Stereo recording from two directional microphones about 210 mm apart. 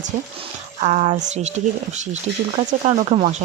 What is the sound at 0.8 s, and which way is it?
Speech, 30° right (ahead or behind).